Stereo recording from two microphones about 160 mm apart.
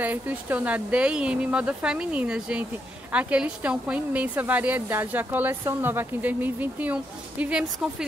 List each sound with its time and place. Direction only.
0.0 s a woman's voice: 10° right (ahead or behind)